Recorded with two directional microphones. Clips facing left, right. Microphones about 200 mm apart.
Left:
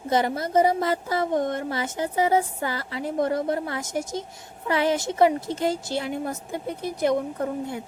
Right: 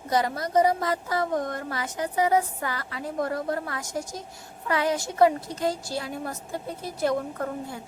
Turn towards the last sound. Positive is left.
turn(degrees=20)  # may be behind; listen again after turning